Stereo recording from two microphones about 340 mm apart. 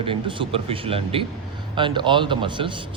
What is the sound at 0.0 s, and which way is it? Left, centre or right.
A man's voice, centre.